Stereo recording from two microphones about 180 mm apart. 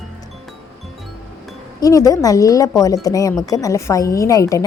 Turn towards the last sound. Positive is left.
turn(degrees=20)  # may be behind; listen again after turning